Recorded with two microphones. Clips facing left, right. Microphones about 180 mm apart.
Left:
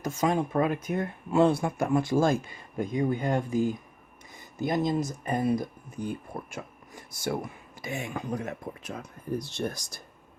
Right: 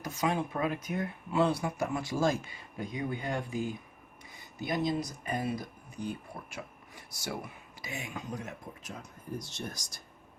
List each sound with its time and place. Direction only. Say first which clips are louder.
0.0 s speech: left 5 dB; 45° left (ahead or behind)